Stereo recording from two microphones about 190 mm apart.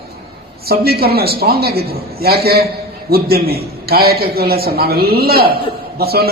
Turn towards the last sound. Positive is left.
turn(degrees=-55)  # may be behind; listen again after turning